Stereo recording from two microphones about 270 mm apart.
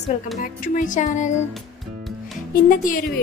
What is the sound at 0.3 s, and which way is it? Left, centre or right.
Speech, left.